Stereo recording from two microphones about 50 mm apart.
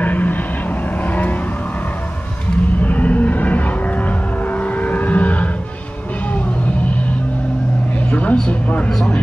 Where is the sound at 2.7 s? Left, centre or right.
Left.